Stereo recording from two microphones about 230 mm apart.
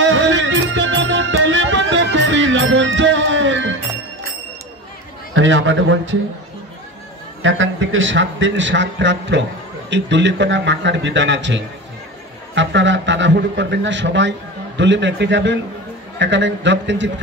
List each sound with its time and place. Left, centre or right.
0.0 s music: right
5.3 s a man's voice: right
7.4 s a man's voice: right